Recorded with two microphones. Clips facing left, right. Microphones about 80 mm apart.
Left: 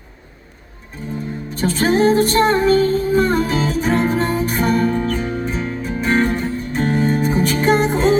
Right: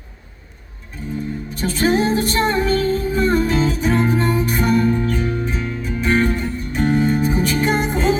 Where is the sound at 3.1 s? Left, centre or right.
Left.